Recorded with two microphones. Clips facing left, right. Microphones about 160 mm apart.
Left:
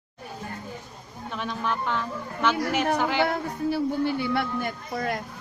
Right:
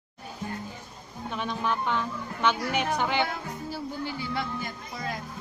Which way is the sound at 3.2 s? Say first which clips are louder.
Left 8 dB; 60° left (ahead or behind).